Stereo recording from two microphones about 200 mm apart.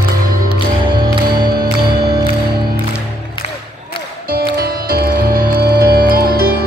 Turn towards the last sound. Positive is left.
turn(degrees=-50)  # may be behind; listen again after turning